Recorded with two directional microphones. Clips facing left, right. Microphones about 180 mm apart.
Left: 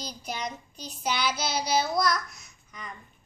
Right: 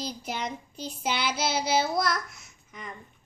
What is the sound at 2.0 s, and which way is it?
Babbling, 25° right (ahead or behind).